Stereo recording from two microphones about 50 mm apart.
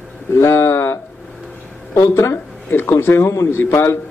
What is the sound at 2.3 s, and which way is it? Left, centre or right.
A man's voice, left.